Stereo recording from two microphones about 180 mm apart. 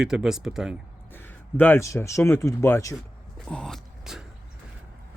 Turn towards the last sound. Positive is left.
turn(degrees=0)  # may be behind; listen again after turning